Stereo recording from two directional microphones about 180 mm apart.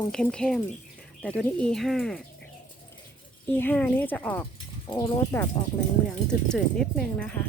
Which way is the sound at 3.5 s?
10° left (ahead or behind).